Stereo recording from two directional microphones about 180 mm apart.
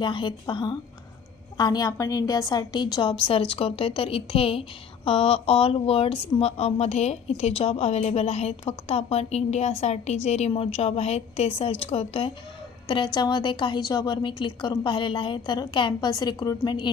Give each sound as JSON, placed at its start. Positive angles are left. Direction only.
{"t": 0.0, "sound": "a woman's voice", "side_deg": 25}